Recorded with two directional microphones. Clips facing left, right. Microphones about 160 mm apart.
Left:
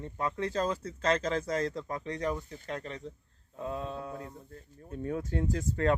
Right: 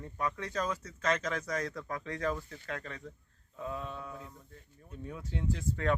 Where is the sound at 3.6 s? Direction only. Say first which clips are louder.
Left 3 dB; 35° left (ahead or behind).